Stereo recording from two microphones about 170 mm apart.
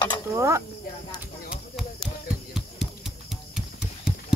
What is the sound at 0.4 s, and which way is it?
Speech, 15° right (ahead or behind).